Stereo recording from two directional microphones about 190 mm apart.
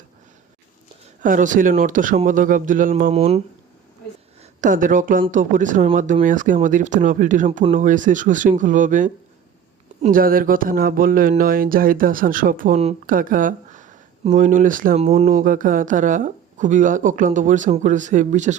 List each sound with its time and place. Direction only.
1.2 s speech: 45° right (ahead or behind)
3.1 s speech: 35° right (ahead or behind)
4.6 s speech: 45° right (ahead or behind)